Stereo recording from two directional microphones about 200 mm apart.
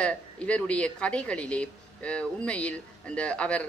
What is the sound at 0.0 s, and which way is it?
A woman's voice, 5° left (ahead or behind).